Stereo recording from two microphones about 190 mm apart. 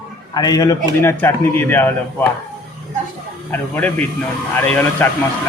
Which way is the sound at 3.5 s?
10° left (ahead or behind).